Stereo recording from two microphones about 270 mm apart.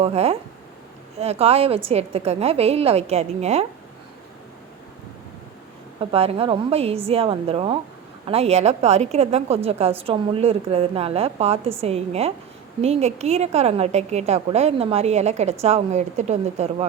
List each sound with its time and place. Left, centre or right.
0.0 s a woman's voice: right
6.0 s a woman's voice: right